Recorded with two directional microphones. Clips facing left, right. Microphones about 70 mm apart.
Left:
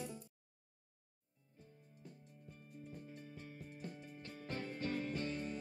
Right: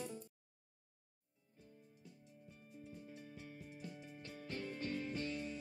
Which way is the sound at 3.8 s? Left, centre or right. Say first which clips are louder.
Left 2 dB; left.